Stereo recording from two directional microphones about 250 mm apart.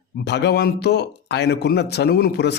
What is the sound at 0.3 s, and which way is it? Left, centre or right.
Speech, left.